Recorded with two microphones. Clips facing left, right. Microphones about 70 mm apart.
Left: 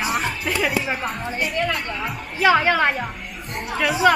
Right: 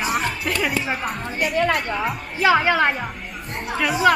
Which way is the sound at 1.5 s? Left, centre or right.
Right.